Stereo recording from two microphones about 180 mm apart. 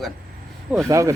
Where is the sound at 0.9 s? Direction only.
15° right (ahead or behind).